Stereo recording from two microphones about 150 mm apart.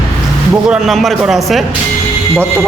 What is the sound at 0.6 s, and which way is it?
A man's voice, 5° right (ahead or behind).